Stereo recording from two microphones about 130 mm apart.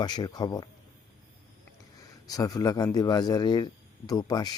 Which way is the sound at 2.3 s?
30° left (ahead or behind).